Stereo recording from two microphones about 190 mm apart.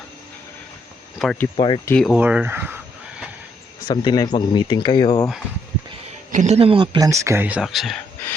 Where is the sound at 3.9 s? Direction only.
20° left (ahead or behind).